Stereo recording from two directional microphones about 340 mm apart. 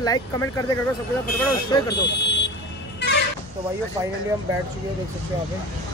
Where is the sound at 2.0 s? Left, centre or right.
Left.